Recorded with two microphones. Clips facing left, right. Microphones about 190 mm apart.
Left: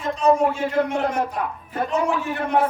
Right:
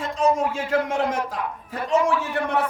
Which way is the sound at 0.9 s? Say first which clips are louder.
Left 1 dB; 90° right.